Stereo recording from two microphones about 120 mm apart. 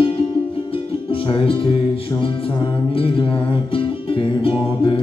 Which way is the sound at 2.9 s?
50° left (ahead or behind).